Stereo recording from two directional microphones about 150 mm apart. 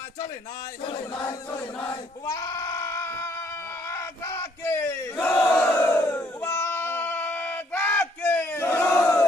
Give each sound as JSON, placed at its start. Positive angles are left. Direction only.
{"t": 1.5, "sound": "sheep", "side_deg": 15}
{"t": 3.8, "sound": "battle cry", "side_deg": 20}